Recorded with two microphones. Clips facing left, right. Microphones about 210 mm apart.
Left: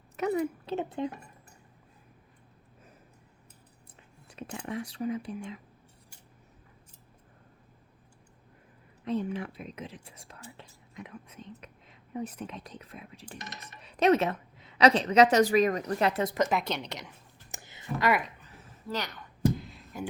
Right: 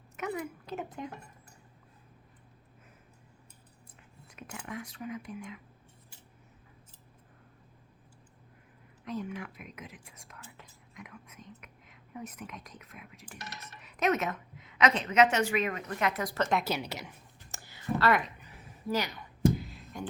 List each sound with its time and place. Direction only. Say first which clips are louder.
0.2 s a woman's voice: left 7 dB; 35° left (ahead or behind)
4.3 s speech: left 5 dB; 35° left (ahead or behind)
9.0 s a woman's voice: left 6 dB; 30° left (ahead or behind)
16.5 s a woman's voice: even; 5° right (ahead or behind)
17.5 s a sound: left 2 dB; 20° left (ahead or behind)
18.4 s a sound: right 4 dB; 10° right (ahead or behind)